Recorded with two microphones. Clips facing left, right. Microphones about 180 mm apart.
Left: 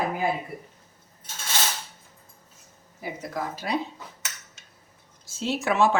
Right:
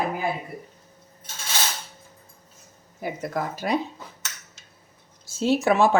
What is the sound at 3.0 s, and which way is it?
Speech, 55° right (ahead or behind).